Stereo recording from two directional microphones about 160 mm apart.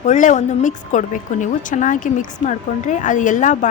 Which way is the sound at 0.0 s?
50° left (ahead or behind).